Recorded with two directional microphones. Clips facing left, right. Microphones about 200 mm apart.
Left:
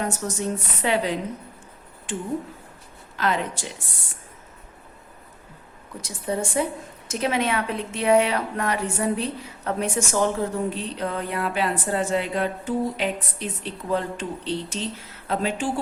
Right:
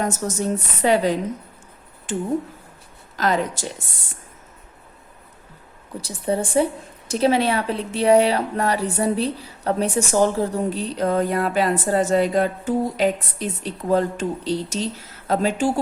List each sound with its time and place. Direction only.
0.1 s a woman's voice: 40° right (ahead or behind)
6.0 s a woman's voice: 35° right (ahead or behind)